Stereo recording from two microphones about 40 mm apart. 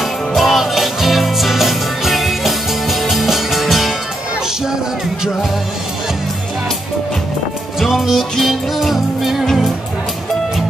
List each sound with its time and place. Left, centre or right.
0.4 s music: centre
7.9 s music: centre